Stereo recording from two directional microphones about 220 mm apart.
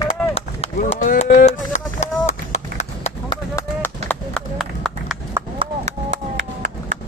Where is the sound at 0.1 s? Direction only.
30° left (ahead or behind).